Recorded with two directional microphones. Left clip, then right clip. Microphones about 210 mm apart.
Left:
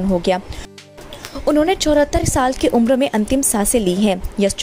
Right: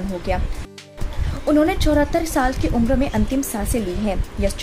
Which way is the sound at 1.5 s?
35° left (ahead or behind).